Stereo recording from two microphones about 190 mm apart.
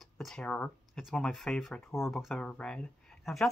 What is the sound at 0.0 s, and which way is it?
Speech, centre (ahead or behind).